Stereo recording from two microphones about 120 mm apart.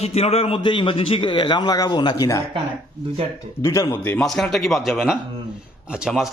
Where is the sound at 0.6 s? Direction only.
40° left (ahead or behind).